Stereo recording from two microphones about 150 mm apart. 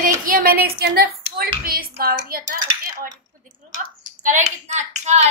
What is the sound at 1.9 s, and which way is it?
Speech, 80° right.